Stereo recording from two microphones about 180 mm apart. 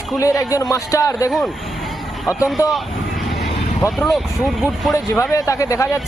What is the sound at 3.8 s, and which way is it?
Speech, centre (ahead or behind).